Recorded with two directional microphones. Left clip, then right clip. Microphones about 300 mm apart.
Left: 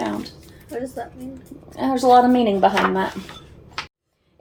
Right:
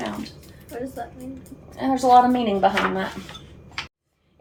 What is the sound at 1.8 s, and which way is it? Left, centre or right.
A woman's voice, left.